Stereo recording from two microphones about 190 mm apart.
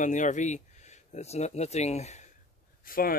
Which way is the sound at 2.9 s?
50° left (ahead or behind).